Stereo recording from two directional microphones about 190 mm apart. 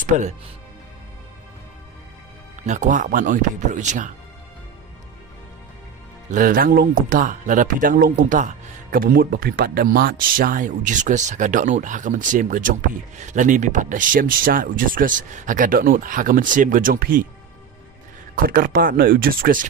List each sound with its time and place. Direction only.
0.0 s speech: 40° right (ahead or behind)
2.6 s speech: 40° right (ahead or behind)
6.3 s speech: 45° right (ahead or behind)
18.4 s speech: 50° right (ahead or behind)